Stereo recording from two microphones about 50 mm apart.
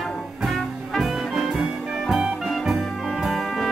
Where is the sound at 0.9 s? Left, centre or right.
Centre.